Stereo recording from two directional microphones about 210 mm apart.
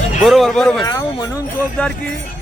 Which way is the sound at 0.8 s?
20° left (ahead or behind).